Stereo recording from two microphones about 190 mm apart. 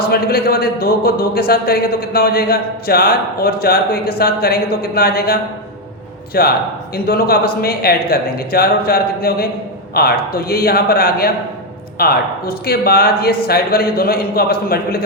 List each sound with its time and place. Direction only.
0.1 s speech: 55° left (ahead or behind)